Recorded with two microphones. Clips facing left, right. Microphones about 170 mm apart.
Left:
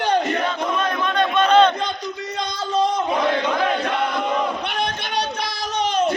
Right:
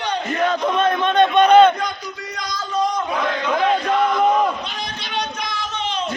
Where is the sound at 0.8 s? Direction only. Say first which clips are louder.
Right 7 dB; 25° right (ahead or behind).